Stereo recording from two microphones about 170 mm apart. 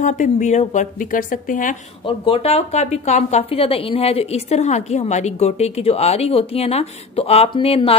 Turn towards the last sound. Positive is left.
turn(degrees=35)  # may be behind; listen again after turning